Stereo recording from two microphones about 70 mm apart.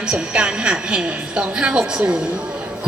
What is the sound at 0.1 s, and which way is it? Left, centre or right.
A woman's voice, centre.